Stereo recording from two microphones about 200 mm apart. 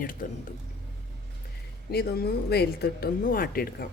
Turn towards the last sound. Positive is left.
turn(degrees=45)  # may be behind; listen again after turning